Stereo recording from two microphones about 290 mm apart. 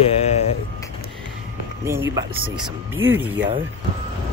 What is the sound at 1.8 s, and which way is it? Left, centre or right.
Speech, centre.